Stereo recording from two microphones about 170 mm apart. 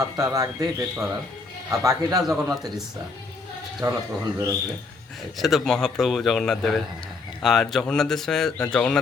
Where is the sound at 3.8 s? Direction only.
20° right (ahead or behind).